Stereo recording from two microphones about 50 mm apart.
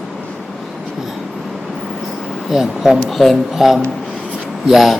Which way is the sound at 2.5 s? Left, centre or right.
Centre.